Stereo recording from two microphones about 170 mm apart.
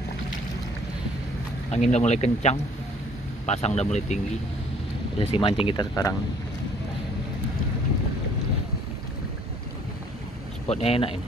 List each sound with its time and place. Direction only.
1.7 s speech: 40° left (ahead or behind)
5.3 s speech: 30° left (ahead or behind)
10.7 s speech: 35° left (ahead or behind)